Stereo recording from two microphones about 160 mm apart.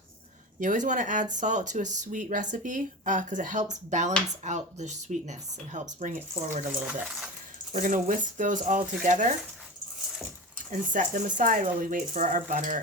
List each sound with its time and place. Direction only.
0.6 s speech: 50° right (ahead or behind)
6.7 s speech: 5° right (ahead or behind)
7.7 s speech: 55° right (ahead or behind)
10.7 s speech: 55° right (ahead or behind)